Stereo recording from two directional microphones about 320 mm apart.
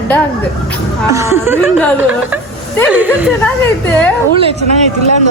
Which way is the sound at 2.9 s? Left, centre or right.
Centre.